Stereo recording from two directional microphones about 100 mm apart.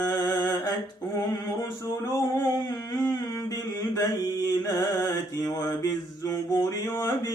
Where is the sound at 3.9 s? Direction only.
40° left (ahead or behind).